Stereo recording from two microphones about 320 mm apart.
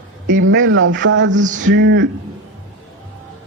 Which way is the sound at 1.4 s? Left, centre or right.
Right.